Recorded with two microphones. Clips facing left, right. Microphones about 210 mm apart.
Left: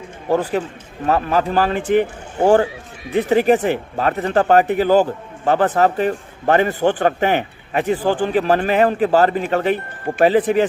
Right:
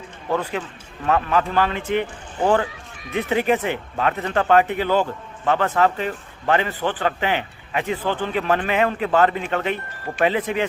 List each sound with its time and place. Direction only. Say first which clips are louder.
0.3 s a man's voice: left 6 dB; 40° left (ahead or behind)